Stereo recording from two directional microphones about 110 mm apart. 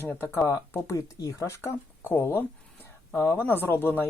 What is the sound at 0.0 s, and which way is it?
Speech, 20° left (ahead or behind).